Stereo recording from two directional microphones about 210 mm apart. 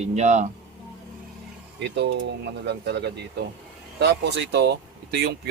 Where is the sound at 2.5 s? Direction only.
55° right (ahead or behind).